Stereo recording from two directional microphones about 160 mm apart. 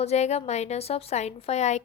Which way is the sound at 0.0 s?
45° left (ahead or behind).